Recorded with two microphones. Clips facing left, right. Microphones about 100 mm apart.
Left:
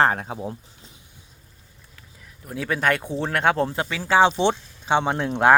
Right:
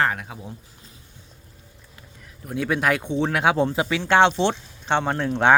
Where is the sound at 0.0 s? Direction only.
35° left (ahead or behind).